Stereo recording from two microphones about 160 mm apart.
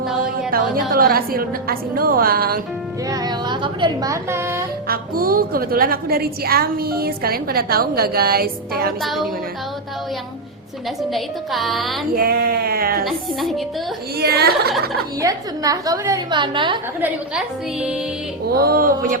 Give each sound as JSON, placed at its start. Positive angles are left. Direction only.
{"t": 0.5, "sound": "a woman's voice", "side_deg": -65}
{"t": 3.1, "sound": "a woman's voice", "side_deg": -25}
{"t": 4.9, "sound": "a woman's voice", "side_deg": -65}
{"t": 9.0, "sound": "a woman's voice", "side_deg": 0}
{"t": 11.1, "sound": "a woman's voice", "side_deg": 0}
{"t": 12.1, "sound": "a woman's voice", "side_deg": -70}
{"t": 13.1, "sound": "a woman's voice", "side_deg": 0}
{"t": 14.2, "sound": "speech", "side_deg": -85}
{"t": 15.2, "sound": "a woman's voice", "side_deg": -20}
{"t": 17.0, "sound": "a woman's voice", "side_deg": -5}
{"t": 18.5, "sound": "a woman's voice", "side_deg": -70}